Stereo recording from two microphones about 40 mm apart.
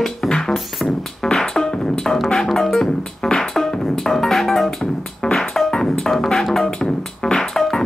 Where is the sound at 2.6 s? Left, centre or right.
Centre.